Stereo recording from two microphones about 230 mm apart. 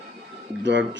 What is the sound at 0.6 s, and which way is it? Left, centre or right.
Speech, right.